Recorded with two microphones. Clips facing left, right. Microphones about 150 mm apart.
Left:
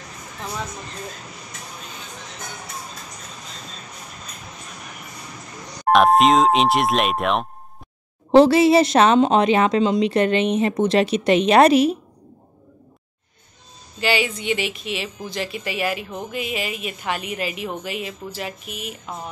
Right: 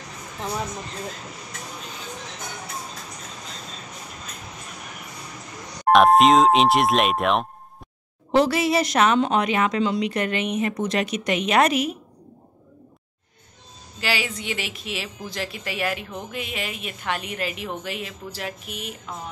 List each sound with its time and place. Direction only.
5.9 s speech: centre (ahead or behind)
8.3 s a woman's voice: 30° left (ahead or behind)
13.9 s speech: centre (ahead or behind)